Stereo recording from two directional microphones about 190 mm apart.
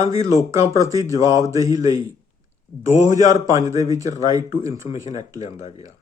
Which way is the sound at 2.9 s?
40° left (ahead or behind).